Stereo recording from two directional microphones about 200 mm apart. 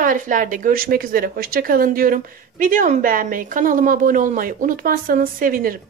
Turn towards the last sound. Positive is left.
turn(degrees=-45)  # may be behind; listen again after turning